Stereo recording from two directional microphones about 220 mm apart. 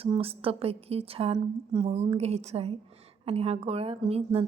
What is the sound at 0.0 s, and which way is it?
A woman's voice, 25° right (ahead or behind).